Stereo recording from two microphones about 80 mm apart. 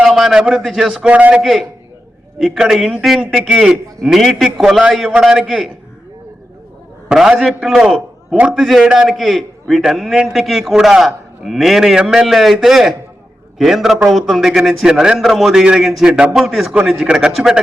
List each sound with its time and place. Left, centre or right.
0.0 s a man's voice: centre
1.0 s a man's voice: centre
1.4 s a man's voice: centre
7.1 s a man's voice: centre
8.5 s a man's voice: centre